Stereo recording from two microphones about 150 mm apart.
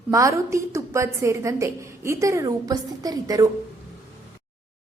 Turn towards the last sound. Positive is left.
turn(degrees=-25)  # may be behind; listen again after turning